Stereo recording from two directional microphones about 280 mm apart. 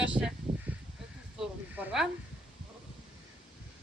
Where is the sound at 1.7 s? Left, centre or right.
Centre.